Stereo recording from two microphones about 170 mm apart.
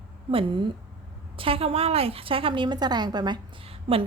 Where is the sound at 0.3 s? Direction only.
30° right (ahead or behind).